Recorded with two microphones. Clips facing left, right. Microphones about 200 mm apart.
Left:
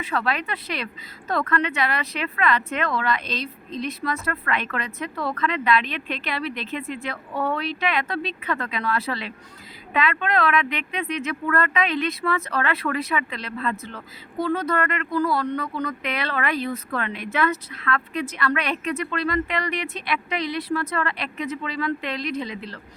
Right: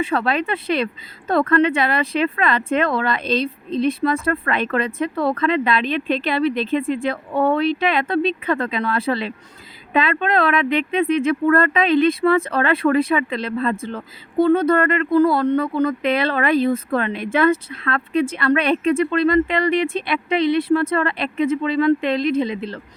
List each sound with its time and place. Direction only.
0.0 s speech: 30° right (ahead or behind)